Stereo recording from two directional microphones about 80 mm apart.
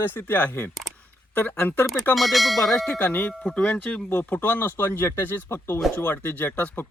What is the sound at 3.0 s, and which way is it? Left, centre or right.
Speech, left.